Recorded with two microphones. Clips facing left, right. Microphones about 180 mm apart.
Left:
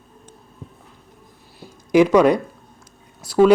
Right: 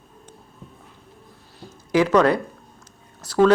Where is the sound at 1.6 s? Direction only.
15° left (ahead or behind).